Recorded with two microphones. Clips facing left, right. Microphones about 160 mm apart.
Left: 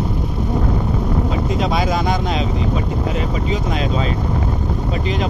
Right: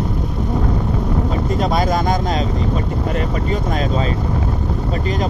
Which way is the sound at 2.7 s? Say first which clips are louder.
Even; 5° left (ahead or behind).